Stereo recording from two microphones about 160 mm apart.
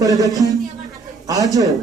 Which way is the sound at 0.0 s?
20° right (ahead or behind).